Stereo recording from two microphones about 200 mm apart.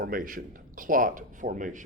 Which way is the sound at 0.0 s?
45° right (ahead or behind).